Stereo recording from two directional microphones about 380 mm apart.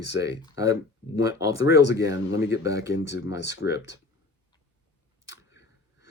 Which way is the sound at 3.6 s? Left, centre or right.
Left.